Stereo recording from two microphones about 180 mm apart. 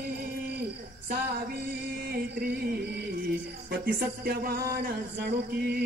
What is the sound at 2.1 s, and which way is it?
Music, 60° right (ahead or behind).